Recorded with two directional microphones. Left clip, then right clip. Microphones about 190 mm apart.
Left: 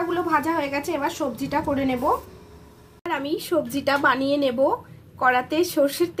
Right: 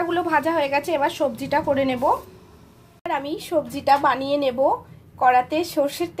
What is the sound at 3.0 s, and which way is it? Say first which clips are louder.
A woman's voice: right 1 dB; 5° right (ahead or behind).